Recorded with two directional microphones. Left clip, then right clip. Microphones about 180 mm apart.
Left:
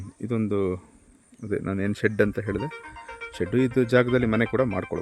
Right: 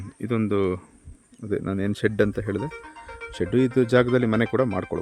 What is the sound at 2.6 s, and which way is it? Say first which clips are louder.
Speech: even; 25° right (ahead or behind).